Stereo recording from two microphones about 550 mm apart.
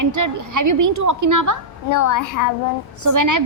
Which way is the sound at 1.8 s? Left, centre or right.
Left.